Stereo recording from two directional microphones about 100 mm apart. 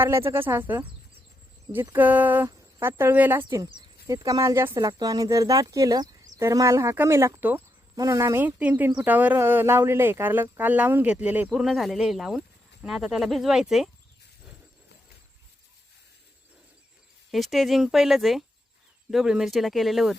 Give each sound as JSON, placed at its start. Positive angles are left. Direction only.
{"t": 0.0, "sound": "speech", "side_deg": -25}
{"t": 2.5, "sound": "speech", "side_deg": -30}
{"t": 8.4, "sound": "speech", "side_deg": -15}
{"t": 11.5, "sound": "speech", "side_deg": 0}
{"t": 17.3, "sound": "speech", "side_deg": 0}